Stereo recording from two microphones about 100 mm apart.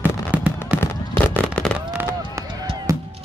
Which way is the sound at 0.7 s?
15° left (ahead or behind).